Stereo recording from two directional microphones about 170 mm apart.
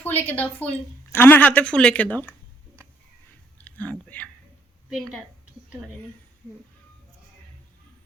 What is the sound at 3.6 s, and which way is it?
Chewing, 10° left (ahead or behind).